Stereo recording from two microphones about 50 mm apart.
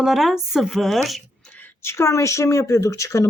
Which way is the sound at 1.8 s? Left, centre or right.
Left.